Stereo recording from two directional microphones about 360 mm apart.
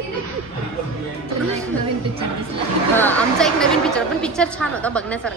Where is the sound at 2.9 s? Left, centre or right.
Centre.